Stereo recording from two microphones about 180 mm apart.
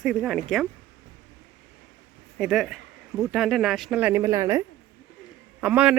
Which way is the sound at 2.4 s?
Centre (ahead or behind).